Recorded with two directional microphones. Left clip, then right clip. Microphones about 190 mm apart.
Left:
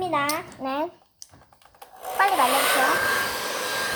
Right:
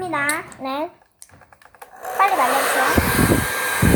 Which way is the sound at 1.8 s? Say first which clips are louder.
Right 4 dB; 25° right (ahead or behind).